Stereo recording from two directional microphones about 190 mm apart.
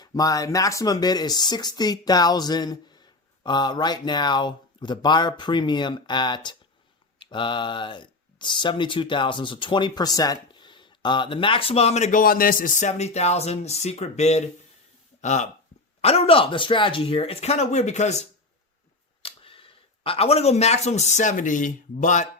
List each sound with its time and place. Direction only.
0.0 s speech: 20° left (ahead or behind); by 22.3 s 40° left (ahead or behind)